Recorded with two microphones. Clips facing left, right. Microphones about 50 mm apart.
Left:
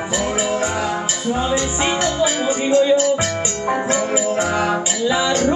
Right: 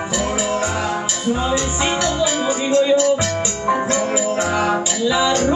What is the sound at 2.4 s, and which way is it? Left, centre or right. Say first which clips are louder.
Music: left 1 dB; centre.